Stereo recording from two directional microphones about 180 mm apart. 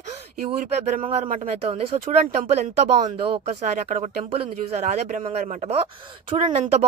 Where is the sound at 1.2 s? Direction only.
50° right (ahead or behind).